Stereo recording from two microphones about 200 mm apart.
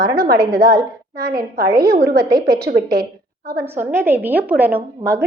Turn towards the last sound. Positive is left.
turn(degrees=-10)  # may be behind; listen again after turning